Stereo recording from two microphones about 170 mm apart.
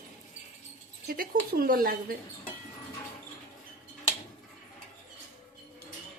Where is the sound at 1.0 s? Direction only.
60° right (ahead or behind).